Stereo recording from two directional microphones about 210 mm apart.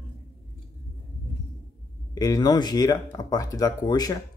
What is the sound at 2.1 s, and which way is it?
Speech, 15° left (ahead or behind).